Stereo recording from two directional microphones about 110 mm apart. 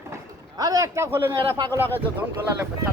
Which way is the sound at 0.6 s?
35° right (ahead or behind).